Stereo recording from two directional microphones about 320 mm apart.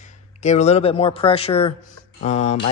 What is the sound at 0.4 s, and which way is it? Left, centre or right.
A man's voice, left.